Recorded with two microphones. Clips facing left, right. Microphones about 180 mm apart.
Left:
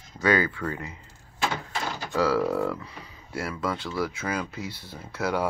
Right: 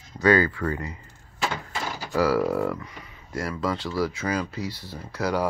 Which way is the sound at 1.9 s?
5° right (ahead or behind).